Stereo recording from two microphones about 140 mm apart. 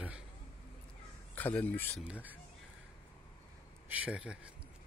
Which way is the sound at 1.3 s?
10° left (ahead or behind).